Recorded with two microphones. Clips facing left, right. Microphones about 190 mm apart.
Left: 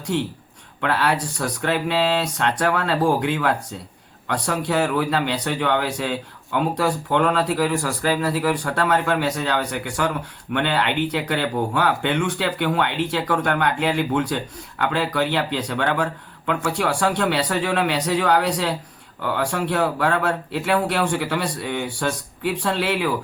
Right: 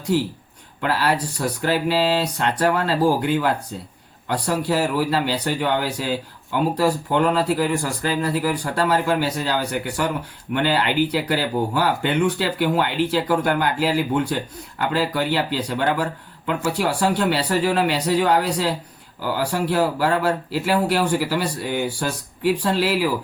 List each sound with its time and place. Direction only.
0.1 s a man's voice: 5° right (ahead or behind)